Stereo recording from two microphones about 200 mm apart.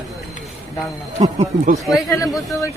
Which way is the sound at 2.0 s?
15° left (ahead or behind).